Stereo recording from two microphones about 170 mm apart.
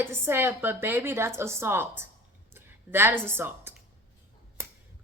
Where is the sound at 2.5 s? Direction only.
15° right (ahead or behind).